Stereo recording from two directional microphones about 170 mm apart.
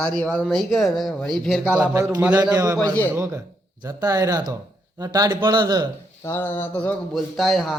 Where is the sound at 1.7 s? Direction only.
15° right (ahead or behind).